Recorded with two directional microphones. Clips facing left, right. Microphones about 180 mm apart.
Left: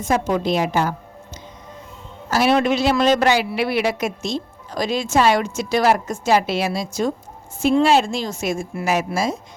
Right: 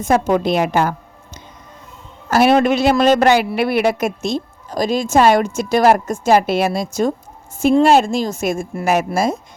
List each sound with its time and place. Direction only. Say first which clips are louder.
0.0 s a woman's voice: right 4 dB; 55° right (ahead or behind)
2.3 s a man's voice: right 4 dB; 55° right (ahead or behind)